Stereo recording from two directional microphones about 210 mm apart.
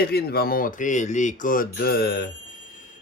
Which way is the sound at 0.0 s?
50° left (ahead or behind).